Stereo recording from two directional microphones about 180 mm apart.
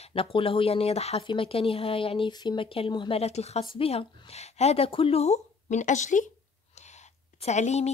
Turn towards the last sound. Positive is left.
turn(degrees=40)  # may be behind; listen again after turning